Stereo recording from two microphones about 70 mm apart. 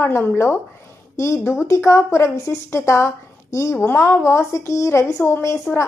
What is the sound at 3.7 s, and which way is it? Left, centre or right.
A woman's voice, left.